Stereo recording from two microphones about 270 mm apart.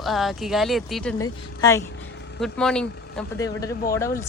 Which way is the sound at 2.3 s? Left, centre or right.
Centre.